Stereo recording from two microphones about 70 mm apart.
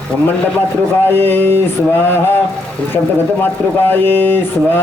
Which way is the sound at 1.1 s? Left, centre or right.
Left.